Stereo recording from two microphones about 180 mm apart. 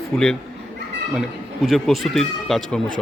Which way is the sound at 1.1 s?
Centre (ahead or behind).